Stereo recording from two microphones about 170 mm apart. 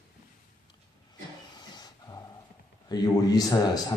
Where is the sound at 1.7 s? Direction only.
25° left (ahead or behind).